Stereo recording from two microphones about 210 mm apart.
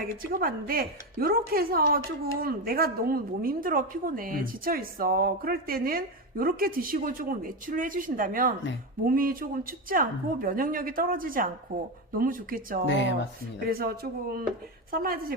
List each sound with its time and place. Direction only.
0.2 s speech: 45° right (ahead or behind)
12.9 s speech: 60° left (ahead or behind)
13.7 s speech: 45° right (ahead or behind)